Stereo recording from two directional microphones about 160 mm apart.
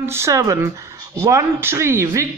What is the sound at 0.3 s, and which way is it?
A woman's voice, 20° right (ahead or behind).